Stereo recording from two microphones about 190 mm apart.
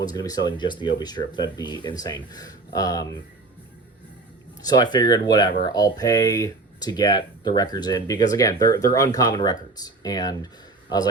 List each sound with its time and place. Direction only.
0.0 s speech: 20° left (ahead or behind)
4.6 s speech: 20° left (ahead or behind)